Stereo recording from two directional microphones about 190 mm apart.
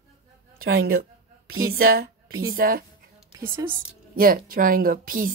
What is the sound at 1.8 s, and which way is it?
A woman's voice, 50° right (ahead or behind).